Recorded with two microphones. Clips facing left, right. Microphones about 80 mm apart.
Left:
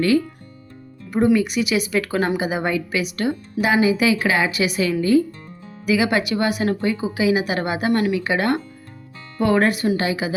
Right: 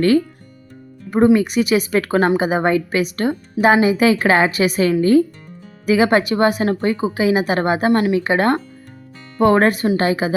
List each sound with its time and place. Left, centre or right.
1.1 s speech: right